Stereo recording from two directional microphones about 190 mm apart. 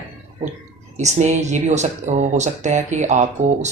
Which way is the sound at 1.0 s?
35° right (ahead or behind).